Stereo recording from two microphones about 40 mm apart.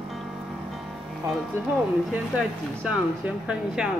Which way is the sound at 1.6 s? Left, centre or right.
Right.